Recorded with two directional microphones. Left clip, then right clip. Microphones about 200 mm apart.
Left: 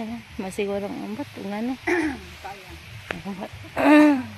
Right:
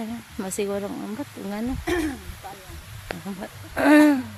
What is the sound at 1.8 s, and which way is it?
Speech, 40° right (ahead or behind).